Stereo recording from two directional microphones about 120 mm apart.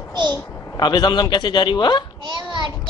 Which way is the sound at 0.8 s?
35° left (ahead or behind).